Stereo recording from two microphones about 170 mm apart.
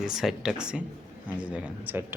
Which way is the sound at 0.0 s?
Centre (ahead or behind).